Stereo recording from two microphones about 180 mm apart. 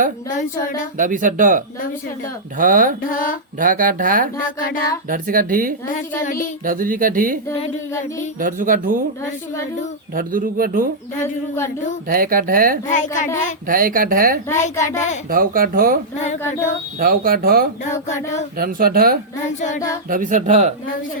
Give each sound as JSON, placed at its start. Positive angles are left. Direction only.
{"t": 0.9, "sound": "speech", "side_deg": -45}
{"t": 3.1, "sound": "a woman's voice", "side_deg": 50}
{"t": 3.6, "sound": "speech", "side_deg": -50}
{"t": 5.9, "sound": "a woman's voice", "side_deg": 45}
{"t": 6.7, "sound": "speech", "side_deg": -50}
{"t": 8.4, "sound": "speech", "side_deg": -50}
{"t": 10.2, "sound": "speech", "side_deg": -50}
{"t": 11.2, "sound": "speech", "side_deg": 15}
{"t": 12.0, "sound": "speech", "side_deg": -50}
{"t": 12.9, "sound": "a woman's voice", "side_deg": 45}
{"t": 13.7, "sound": "speech", "side_deg": -50}
{"t": 14.6, "sound": "a child's voice", "side_deg": 40}
{"t": 15.3, "sound": "speech", "side_deg": -50}
{"t": 17.0, "sound": "speech", "side_deg": -55}